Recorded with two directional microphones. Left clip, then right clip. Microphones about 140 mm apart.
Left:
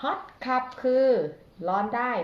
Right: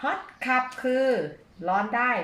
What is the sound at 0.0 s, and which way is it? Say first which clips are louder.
Speech: right 1 dB; 15° right (ahead or behind).